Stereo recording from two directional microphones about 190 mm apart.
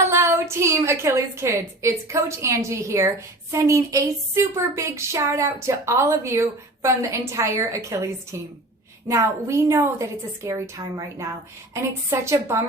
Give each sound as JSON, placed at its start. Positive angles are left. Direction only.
{"t": 0.0, "sound": "a woman's voice", "side_deg": -15}